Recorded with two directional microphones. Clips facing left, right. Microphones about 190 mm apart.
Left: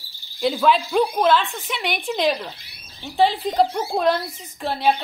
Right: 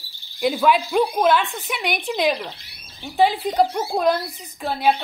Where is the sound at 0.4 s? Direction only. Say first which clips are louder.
Even; 10° right (ahead or behind).